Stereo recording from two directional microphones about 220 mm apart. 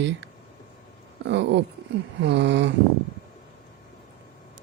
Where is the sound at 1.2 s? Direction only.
55° right (ahead or behind).